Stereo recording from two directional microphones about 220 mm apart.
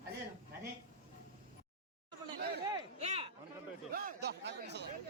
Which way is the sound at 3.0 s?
30° right (ahead or behind).